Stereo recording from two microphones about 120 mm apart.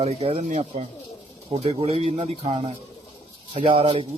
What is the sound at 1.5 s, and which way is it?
Speech, 55° right (ahead or behind).